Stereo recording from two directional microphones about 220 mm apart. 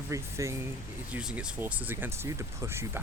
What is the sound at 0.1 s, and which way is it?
Speech, 15° right (ahead or behind).